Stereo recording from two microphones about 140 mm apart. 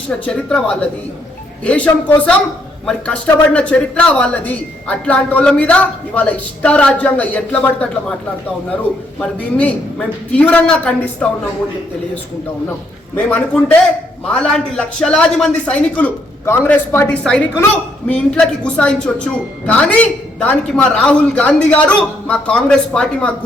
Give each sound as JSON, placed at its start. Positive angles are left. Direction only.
{"t": 0.1, "sound": "speech", "side_deg": 5}
{"t": 9.4, "sound": "speech", "side_deg": 10}
{"t": 13.1, "sound": "speech", "side_deg": 10}
{"t": 18.1, "sound": "speech", "side_deg": 10}